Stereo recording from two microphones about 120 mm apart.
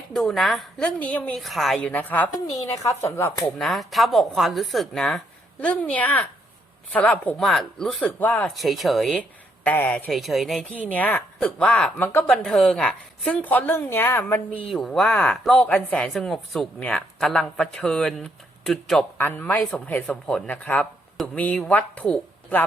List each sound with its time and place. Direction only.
0.1 s a woman's voice: 5° left (ahead or behind)
1.4 s speech: centre (ahead or behind)
1.9 s a woman's voice: 15° left (ahead or behind)
3.6 s speech: centre (ahead or behind)
8.0 s a woman's voice: 10° left (ahead or behind)
8.5 s speech: centre (ahead or behind)
9.6 s a woman's voice: 15° left (ahead or behind)
10.1 s speech: centre (ahead or behind)
10.7 s a woman's voice: 10° left (ahead or behind)
14.7 s speech: centre (ahead or behind)
19.1 s a woman's voice: 15° left (ahead or behind)